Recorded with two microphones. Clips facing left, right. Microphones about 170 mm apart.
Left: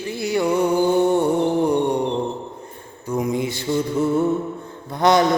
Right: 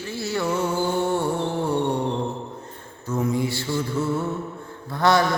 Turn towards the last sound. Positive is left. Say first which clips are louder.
# left 3 dB
turn(degrees=20)  # may be behind; listen again after turning